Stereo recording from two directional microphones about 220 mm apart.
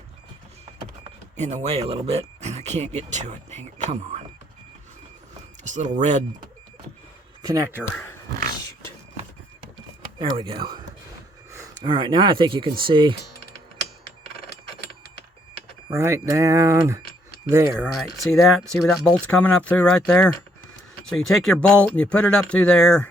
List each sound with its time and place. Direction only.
1.4 s speech: 30° right (ahead or behind)
5.6 s speech: 35° right (ahead or behind)
7.4 s speech: 15° right (ahead or behind)
10.2 s speech: 25° right (ahead or behind)
15.9 s speech: 15° right (ahead or behind)
18.3 s speech: centre (ahead or behind)